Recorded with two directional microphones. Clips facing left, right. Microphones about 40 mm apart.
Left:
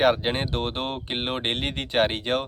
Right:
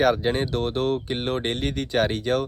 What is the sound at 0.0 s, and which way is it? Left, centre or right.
Speech, left.